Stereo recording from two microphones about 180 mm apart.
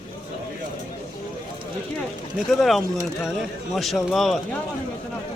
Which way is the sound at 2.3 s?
Centre (ahead or behind).